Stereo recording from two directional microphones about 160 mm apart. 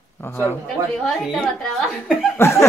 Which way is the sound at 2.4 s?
15° left (ahead or behind).